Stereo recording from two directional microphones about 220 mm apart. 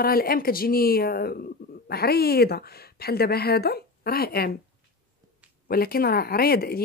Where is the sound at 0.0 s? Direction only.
45° left (ahead or behind).